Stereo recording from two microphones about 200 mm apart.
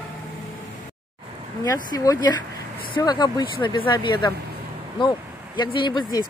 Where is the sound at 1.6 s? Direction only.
15° left (ahead or behind).